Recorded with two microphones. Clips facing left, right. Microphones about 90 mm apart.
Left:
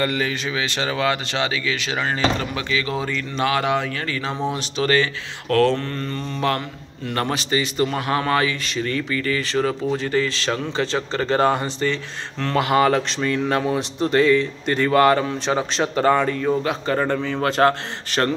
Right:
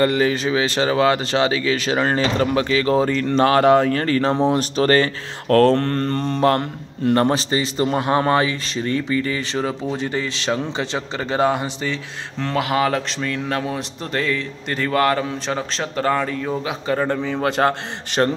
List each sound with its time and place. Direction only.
0.0 s speech: 30° right (ahead or behind)
5.8 s mantra: 55° right (ahead or behind)
7.2 s speech: 30° right (ahead or behind)